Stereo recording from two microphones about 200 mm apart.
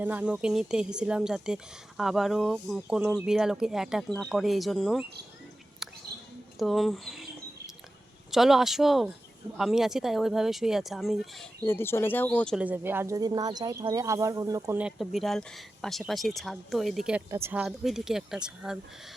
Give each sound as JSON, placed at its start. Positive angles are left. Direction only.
{"t": 0.0, "sound": "speech", "side_deg": -10}
{"t": 5.8, "sound": "whispering", "side_deg": 0}
{"t": 6.6, "sound": "speech", "side_deg": 0}
{"t": 8.3, "sound": "speech", "side_deg": 0}
{"t": 11.6, "sound": "speech", "side_deg": 10}
{"t": 12.5, "sound": "speech", "side_deg": -10}